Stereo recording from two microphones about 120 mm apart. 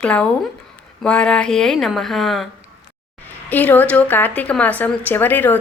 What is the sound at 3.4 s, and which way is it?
Speech, 15° left (ahead or behind).